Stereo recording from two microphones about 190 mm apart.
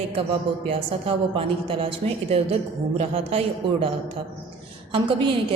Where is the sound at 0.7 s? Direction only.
30° right (ahead or behind).